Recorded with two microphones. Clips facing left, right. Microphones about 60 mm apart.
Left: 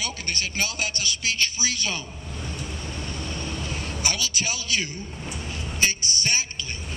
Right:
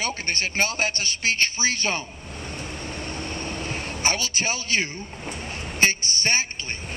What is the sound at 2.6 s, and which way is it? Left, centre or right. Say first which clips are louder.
Vehicle: right 1 dB; right.